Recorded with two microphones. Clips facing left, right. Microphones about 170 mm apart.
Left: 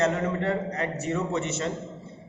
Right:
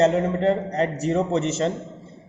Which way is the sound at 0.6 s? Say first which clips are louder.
Right 6 dB; 35° right (ahead or behind).